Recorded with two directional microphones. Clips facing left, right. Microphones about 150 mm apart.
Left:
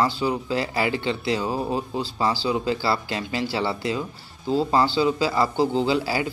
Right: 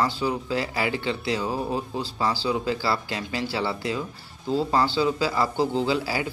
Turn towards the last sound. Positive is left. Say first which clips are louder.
# left 2 dB
turn(degrees=25)  # may be behind; listen again after turning